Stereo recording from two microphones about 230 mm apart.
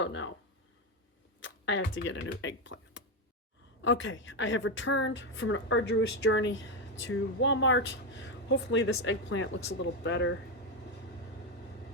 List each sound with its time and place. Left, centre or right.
0.0 s speech: left
1.4 s speech: left